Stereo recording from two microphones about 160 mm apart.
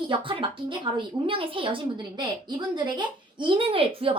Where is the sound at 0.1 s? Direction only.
30° right (ahead or behind).